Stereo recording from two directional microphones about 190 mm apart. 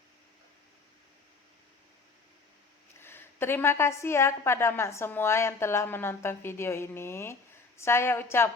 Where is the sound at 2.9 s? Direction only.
10° left (ahead or behind).